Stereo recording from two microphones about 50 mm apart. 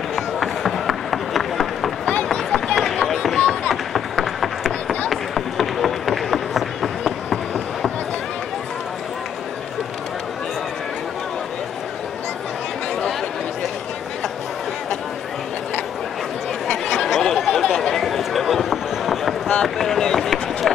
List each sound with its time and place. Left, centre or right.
0.1 s run: centre
3.3 s a sound: centre
3.9 s run: centre
16.9 s a sound: centre
17.5 s chatter: centre
19.5 s run: centre